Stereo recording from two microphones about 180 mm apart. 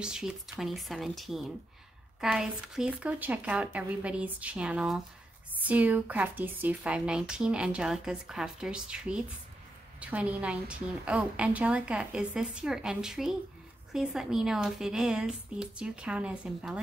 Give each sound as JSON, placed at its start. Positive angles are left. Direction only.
{"t": 0.0, "sound": "a woman's voice", "side_deg": -5}